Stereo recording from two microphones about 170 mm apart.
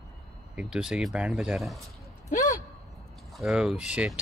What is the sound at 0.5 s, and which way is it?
Speech, 5° right (ahead or behind).